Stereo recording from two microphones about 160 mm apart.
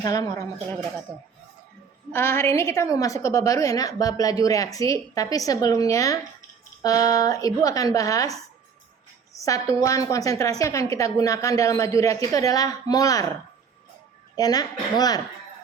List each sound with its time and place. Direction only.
0.0 s a woman's voice: 25° left (ahead or behind)
1.1 s a woman's voice: 10° left (ahead or behind)
14.3 s a woman's voice: 25° left (ahead or behind)